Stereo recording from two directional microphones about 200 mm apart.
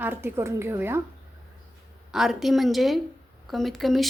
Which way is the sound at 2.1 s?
Centre (ahead or behind).